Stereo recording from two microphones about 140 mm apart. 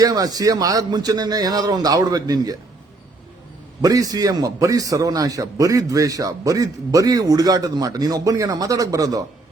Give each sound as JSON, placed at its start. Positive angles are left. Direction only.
{"t": 0.0, "sound": "a man's voice", "side_deg": -25}
{"t": 3.8, "sound": "a man's voice", "side_deg": -25}